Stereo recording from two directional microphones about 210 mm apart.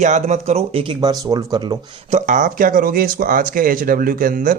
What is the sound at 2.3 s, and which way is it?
Speech, 40° right (ahead or behind).